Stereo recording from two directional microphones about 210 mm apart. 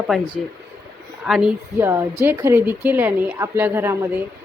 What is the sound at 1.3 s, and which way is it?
Speech, 5° right (ahead or behind).